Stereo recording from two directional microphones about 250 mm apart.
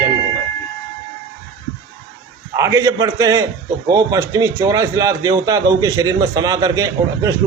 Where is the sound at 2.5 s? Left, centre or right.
Centre.